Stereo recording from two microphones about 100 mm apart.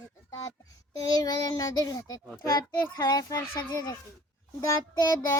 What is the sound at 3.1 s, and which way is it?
A child's voice, 35° left (ahead or behind).